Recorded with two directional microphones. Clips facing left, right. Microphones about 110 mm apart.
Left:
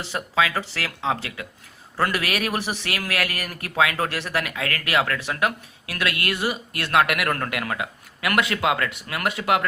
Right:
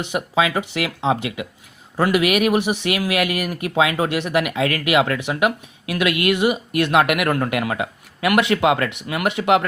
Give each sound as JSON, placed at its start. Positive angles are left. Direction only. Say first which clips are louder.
{"t": 0.0, "sound": "speech", "louder": "right 3 dB", "side_deg": -20}